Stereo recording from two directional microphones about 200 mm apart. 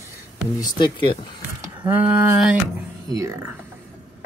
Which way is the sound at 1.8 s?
10° right (ahead or behind).